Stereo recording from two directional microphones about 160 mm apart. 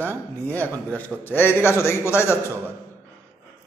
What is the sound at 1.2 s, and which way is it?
A man's voice, 15° left (ahead or behind).